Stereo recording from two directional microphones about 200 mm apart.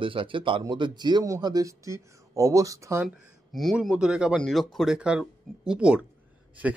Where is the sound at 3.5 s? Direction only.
Centre (ahead or behind).